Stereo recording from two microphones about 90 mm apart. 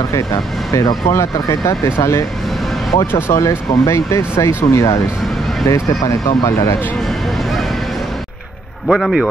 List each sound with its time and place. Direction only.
1.0 s speech: 35° left (ahead or behind)
8.8 s speech: centre (ahead or behind)